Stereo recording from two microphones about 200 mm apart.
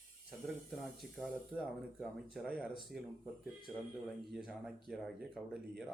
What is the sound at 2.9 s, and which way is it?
Speech, 50° right (ahead or behind).